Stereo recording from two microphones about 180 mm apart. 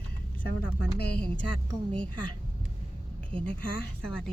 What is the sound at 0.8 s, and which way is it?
Speech, 65° left (ahead or behind).